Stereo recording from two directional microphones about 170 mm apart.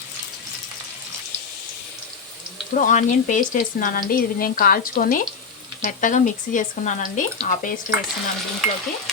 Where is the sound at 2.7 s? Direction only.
50° left (ahead or behind).